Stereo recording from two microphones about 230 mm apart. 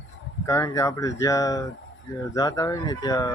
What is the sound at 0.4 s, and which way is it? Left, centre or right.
Speech, centre.